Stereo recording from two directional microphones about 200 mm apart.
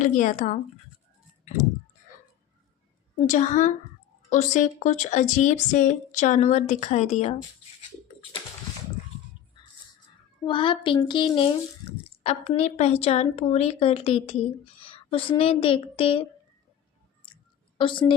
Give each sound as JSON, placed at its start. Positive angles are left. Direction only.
{"t": 0.0, "sound": "a woman's voice", "side_deg": 40}
{"t": 3.2, "sound": "a woman's voice", "side_deg": 40}
{"t": 10.4, "sound": "speech", "side_deg": 25}
{"t": 17.7, "sound": "a woman's voice", "side_deg": 25}